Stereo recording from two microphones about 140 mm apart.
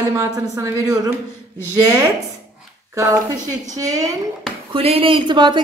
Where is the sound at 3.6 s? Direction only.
25° right (ahead or behind).